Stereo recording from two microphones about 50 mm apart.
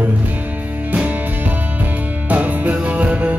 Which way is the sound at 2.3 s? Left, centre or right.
Right.